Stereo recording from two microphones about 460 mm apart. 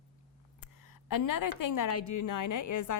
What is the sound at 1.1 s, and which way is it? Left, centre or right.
A woman's voice, left.